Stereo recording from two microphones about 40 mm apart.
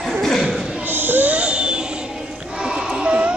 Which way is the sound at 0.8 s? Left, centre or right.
Right.